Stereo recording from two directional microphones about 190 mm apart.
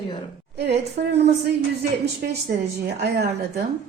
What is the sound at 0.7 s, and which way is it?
Speech, 35° right (ahead or behind).